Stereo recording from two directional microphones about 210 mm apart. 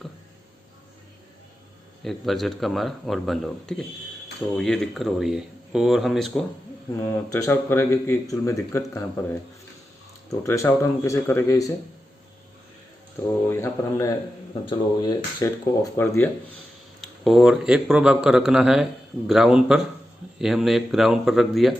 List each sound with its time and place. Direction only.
2.0 s speech: centre (ahead or behind)
7.3 s speech: 15° left (ahead or behind)
10.2 s speech: 15° left (ahead or behind)
13.5 s speech: 15° left (ahead or behind)
17.0 s speech: centre (ahead or behind)